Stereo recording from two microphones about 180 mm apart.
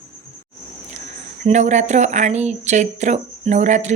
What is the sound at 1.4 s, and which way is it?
Speech, 40° right (ahead or behind).